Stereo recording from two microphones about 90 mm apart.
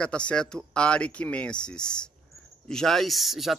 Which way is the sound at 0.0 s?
10° left (ahead or behind).